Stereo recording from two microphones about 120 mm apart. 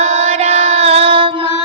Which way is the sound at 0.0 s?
65° right (ahead or behind).